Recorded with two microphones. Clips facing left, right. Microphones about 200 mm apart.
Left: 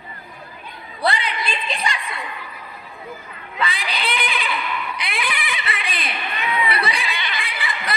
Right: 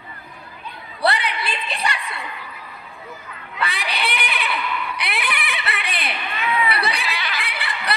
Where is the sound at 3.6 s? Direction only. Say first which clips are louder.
Even; 65° right (ahead or behind).